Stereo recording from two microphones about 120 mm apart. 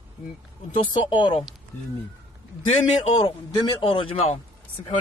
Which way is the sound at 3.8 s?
50° left (ahead or behind).